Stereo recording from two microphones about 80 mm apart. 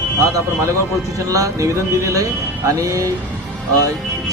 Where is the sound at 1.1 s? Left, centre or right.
Right.